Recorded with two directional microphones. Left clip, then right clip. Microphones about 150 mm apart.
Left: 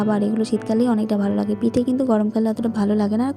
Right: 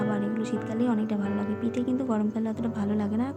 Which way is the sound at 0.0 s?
40° left (ahead or behind).